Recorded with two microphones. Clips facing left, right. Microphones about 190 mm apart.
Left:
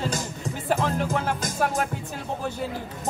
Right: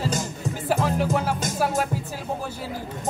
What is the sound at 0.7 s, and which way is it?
Music, 5° right (ahead or behind).